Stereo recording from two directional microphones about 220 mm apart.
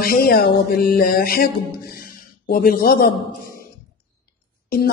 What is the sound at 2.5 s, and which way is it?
Speech, 40° left (ahead or behind).